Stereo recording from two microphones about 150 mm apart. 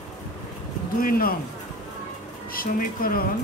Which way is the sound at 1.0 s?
75° left (ahead or behind).